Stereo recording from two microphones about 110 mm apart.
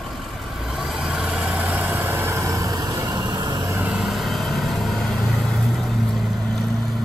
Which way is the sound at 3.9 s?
Centre (ahead or behind).